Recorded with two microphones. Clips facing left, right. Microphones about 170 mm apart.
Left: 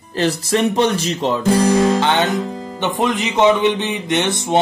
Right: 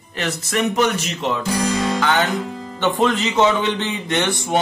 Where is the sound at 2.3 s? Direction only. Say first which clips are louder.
Left 3 dB; 40° left (ahead or behind).